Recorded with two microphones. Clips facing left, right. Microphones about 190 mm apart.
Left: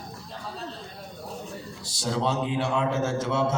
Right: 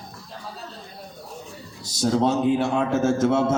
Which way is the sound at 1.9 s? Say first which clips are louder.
Right 7 dB; 45° right (ahead or behind).